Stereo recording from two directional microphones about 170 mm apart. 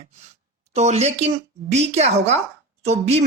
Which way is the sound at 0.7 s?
40° right (ahead or behind).